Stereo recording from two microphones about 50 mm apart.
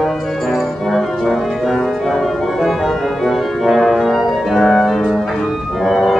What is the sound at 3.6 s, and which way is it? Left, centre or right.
Music, centre.